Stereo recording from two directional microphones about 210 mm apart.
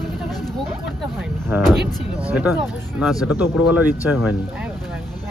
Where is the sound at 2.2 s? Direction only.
5° right (ahead or behind).